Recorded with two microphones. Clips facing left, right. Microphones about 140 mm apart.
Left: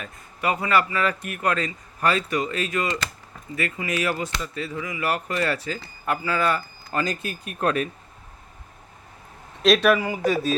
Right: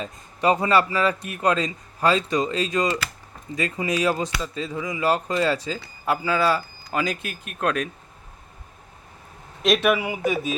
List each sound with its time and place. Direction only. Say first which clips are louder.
0.0 s a man's voice: right 5 dB; 25° right (ahead or behind)
7.6 s speech: left 1 dB; 5° left (ahead or behind)
9.6 s speech: left 2 dB; 5° right (ahead or behind)